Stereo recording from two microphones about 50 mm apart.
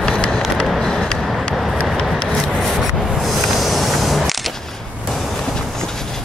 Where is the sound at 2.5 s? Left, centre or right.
Centre.